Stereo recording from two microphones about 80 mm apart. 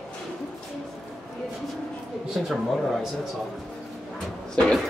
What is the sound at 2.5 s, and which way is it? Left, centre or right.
Speech, centre.